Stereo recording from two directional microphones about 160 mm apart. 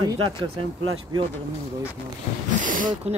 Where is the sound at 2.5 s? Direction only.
55° right (ahead or behind).